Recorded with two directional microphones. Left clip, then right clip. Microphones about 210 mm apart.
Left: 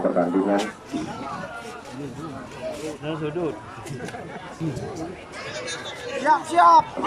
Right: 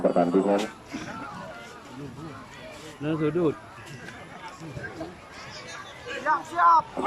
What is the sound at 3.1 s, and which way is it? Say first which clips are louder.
Speech: right 3 dB; 15° right (ahead or behind).